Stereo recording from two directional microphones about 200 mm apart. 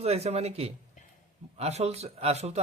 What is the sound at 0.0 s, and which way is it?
Speech, 30° right (ahead or behind).